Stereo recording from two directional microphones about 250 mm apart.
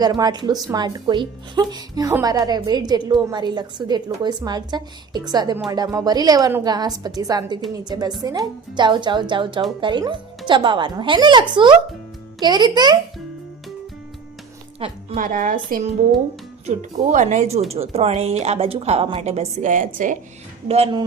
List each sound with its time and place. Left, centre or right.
0.0 s a woman's voice: centre
14.8 s a woman's voice: right